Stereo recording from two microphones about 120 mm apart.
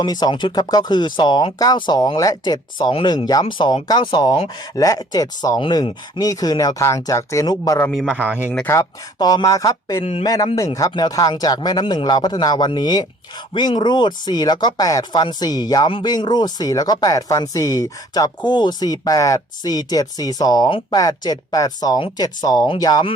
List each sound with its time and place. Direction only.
0.0 s speech: 35° left (ahead or behind)
10.0 s speech: 55° left (ahead or behind)
10.2 s speech: 30° left (ahead or behind)